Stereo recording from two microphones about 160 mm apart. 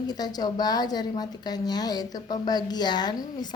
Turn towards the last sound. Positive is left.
turn(degrees=25)  # may be behind; listen again after turning